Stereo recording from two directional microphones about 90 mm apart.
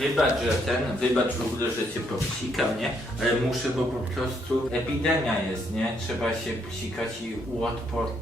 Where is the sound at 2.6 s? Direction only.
Centre (ahead or behind).